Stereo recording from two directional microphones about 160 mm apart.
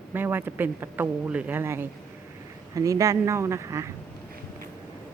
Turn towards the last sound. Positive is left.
turn(degrees=-20)  # may be behind; listen again after turning